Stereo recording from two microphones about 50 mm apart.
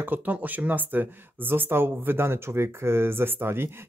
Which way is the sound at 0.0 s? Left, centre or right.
Right.